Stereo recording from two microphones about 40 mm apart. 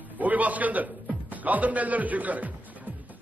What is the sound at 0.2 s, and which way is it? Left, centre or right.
A man's voice, right.